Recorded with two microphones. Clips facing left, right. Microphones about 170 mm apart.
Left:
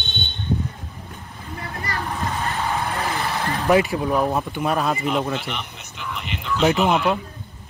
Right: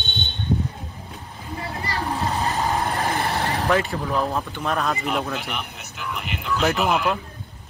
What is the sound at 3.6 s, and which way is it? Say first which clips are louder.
Speech: left 7 dB; 10° left (ahead or behind).